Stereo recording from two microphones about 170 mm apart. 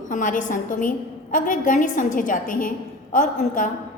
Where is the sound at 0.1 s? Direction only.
50° left (ahead or behind).